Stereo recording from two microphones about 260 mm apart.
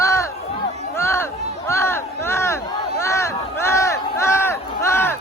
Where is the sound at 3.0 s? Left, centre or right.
Centre.